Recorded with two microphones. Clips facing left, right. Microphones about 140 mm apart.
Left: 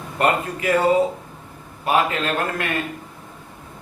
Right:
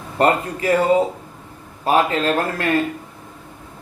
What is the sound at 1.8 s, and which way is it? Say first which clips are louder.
Speech: right 3 dB; 35° right (ahead or behind).